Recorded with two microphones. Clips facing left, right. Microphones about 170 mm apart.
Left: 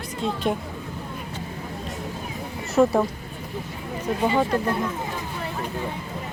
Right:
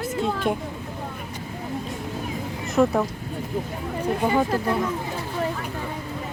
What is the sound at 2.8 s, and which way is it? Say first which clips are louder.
Speech: left 1 dB; 5° left (ahead or behind).